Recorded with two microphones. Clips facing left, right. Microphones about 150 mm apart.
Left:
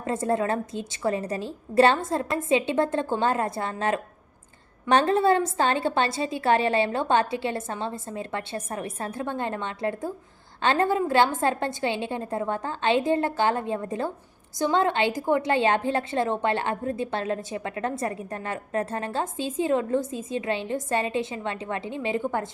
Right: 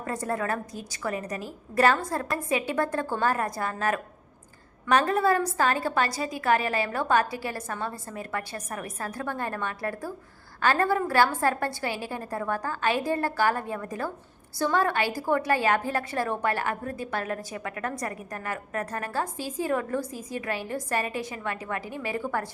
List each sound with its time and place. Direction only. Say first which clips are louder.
0.0 s a woman's voice: left 5 dB; 25° left (ahead or behind)